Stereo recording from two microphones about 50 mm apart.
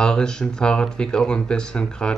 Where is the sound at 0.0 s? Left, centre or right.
Centre.